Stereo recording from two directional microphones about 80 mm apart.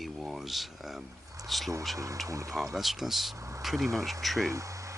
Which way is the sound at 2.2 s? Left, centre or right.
Right.